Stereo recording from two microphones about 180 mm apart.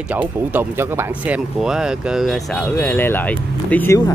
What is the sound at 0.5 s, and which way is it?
Speech, 10° right (ahead or behind).